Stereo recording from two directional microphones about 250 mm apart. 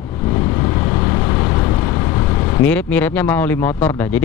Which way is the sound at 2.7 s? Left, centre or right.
Centre.